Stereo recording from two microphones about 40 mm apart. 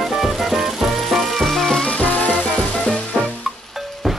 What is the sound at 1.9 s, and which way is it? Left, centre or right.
Music, left.